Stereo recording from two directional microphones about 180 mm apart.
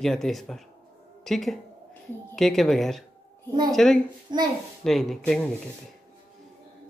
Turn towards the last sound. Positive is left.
turn(degrees=0)  # may be behind; listen again after turning